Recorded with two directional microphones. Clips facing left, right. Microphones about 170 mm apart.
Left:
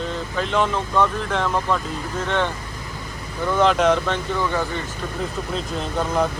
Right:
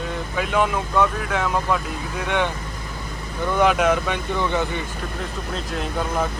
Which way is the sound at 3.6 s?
10° right (ahead or behind).